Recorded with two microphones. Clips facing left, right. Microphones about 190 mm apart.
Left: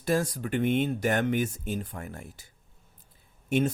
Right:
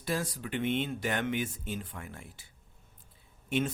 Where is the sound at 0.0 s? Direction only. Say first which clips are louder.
Left 7 dB; 45° left (ahead or behind).